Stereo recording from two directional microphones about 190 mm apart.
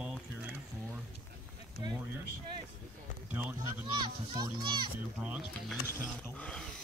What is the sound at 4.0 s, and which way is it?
Speech, 25° right (ahead or behind).